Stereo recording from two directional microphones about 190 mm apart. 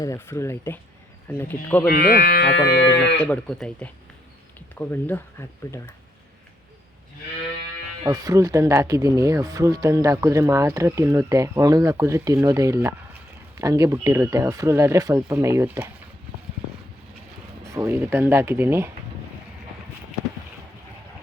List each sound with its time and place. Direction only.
0.0 s speech: 15° left (ahead or behind)
1.9 s speech: 50° left (ahead or behind)
3.2 s speech: 5° left (ahead or behind)
8.0 s speech: 15° right (ahead or behind)
17.6 s speech: 15° right (ahead or behind)